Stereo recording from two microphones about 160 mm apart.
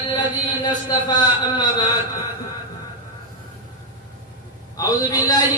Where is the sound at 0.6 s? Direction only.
25° left (ahead or behind).